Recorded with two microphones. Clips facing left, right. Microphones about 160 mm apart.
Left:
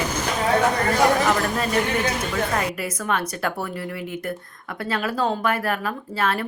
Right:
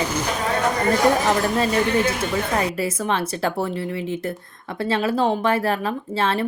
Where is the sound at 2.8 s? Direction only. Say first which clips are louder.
Right 3 dB; 25° right (ahead or behind).